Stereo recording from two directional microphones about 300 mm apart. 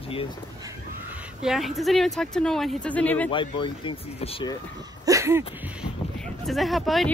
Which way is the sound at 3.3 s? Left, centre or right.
Centre.